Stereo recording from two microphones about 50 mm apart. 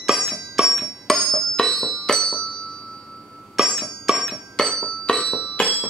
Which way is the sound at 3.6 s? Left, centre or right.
Centre.